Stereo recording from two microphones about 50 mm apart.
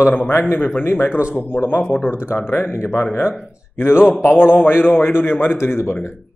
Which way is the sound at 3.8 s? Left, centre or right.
Left.